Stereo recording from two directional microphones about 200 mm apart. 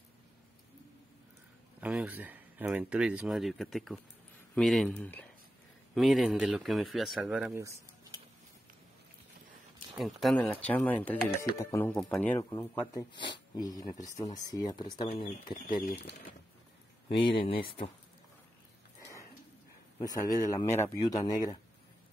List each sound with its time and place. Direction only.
1.8 s speech: 5° right (ahead or behind)
9.9 s speech: centre (ahead or behind); by 15.6 s 25° left (ahead or behind)
15.8 s speech: 50° left (ahead or behind)
17.1 s speech: 25° left (ahead or behind)
20.0 s speech: 15° left (ahead or behind)